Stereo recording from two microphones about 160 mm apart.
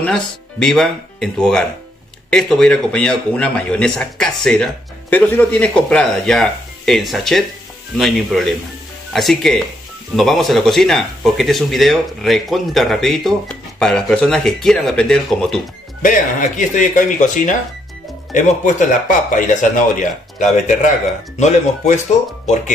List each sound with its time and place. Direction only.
0.0 s speech: 5° left (ahead or behind)
16.0 s speech: 55° left (ahead or behind)